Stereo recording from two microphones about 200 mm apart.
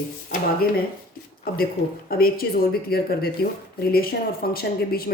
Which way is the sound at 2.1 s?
50° left (ahead or behind).